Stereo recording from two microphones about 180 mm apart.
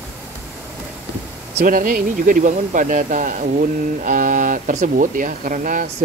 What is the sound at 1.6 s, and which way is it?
Speech, 50° right (ahead or behind).